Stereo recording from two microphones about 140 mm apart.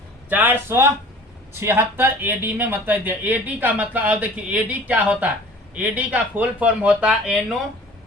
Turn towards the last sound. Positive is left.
turn(degrees=-5)  # may be behind; listen again after turning